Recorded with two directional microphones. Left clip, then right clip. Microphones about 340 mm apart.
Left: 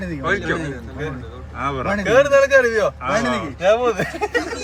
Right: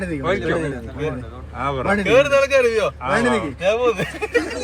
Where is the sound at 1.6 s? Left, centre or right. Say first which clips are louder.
Even; centre.